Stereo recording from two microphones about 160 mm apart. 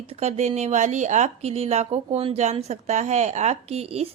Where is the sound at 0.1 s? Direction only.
40° right (ahead or behind).